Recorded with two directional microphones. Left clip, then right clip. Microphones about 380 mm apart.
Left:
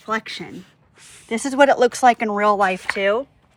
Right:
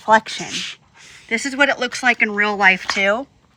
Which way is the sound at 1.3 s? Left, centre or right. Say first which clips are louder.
Left 2 dB; centre.